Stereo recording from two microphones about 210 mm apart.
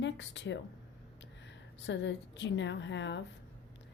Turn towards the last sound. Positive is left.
turn(degrees=60)  # may be behind; listen again after turning